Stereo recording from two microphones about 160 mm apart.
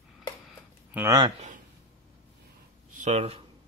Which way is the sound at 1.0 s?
25° right (ahead or behind).